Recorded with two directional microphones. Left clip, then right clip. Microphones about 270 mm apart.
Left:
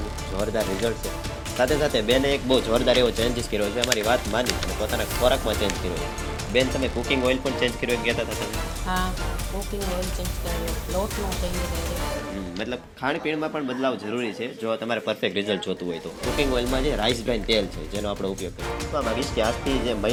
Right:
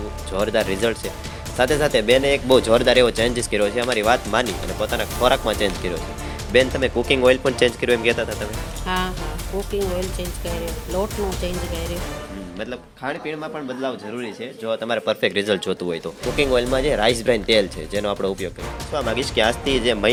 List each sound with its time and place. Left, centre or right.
0.3 s speech: right
13.8 s speech: centre
14.7 s speech: right